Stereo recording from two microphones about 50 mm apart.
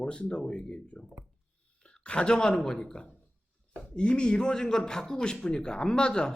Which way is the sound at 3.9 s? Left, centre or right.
Centre.